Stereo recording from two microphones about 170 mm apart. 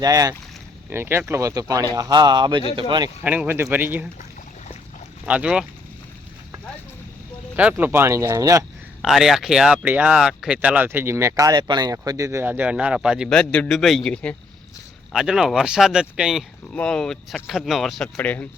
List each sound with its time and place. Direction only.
0.0 s speech: 20° right (ahead or behind)
3.2 s speech: 10° right (ahead or behind)
5.2 s speech: 5° right (ahead or behind)
7.5 s speech: 10° right (ahead or behind)
9.0 s speech: centre (ahead or behind)